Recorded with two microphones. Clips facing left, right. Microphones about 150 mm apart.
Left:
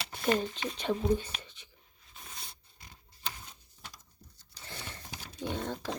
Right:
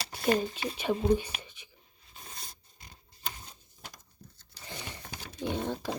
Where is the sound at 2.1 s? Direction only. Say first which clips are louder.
Right 1 dB; 40° right (ahead or behind).